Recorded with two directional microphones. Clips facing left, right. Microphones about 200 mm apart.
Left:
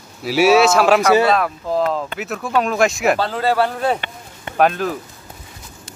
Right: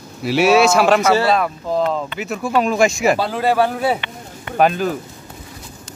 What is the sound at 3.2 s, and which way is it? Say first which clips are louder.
A man's voice: right 1 dB; 10° right (ahead or behind).